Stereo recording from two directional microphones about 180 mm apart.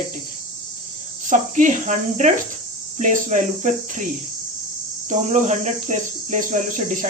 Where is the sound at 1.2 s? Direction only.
45° right (ahead or behind).